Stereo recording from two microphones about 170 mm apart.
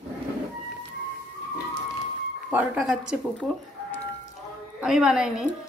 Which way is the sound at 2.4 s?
5° right (ahead or behind).